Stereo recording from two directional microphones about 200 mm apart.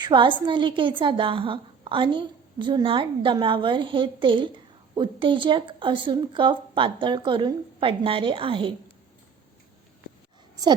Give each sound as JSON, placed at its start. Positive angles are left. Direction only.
{"t": 0.0, "sound": "a woman's voice", "side_deg": -25}